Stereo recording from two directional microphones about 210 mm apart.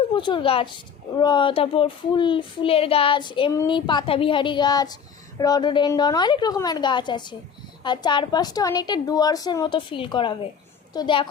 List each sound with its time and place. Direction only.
0.1 s a woman's voice: 25° left (ahead or behind)